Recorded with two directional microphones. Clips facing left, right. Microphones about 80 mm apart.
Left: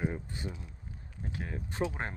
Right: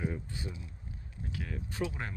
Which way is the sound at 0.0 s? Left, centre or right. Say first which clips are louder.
Left 2 dB; left.